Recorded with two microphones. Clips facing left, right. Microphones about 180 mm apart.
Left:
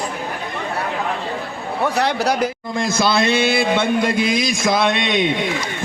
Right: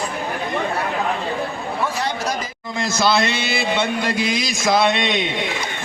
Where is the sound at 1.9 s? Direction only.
65° left (ahead or behind).